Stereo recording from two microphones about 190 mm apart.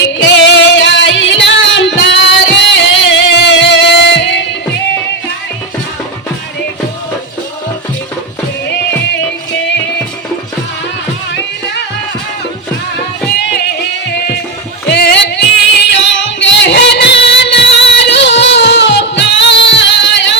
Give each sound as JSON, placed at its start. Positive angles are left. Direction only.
{"t": 0.2, "sound": "music", "side_deg": 70}
{"t": 13.3, "sound": "music", "side_deg": 60}